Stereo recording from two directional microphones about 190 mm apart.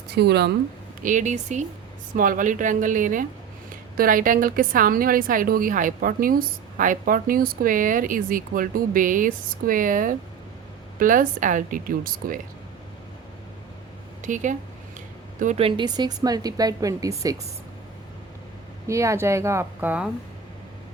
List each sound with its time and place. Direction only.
0.1 s speech: 60° right (ahead or behind)
1.0 s a woman's voice: 40° right (ahead or behind)
14.2 s a woman's voice: 40° right (ahead or behind); by 17.3 s 20° right (ahead or behind)
18.9 s a woman's voice: 15° right (ahead or behind)